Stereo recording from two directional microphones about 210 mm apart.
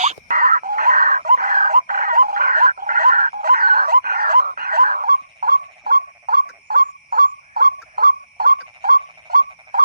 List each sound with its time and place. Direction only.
0.0 s groan: 40° right (ahead or behind)